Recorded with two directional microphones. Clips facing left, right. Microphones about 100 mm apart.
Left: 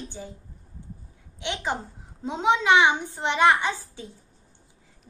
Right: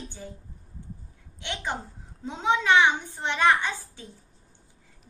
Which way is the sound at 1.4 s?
15° left (ahead or behind).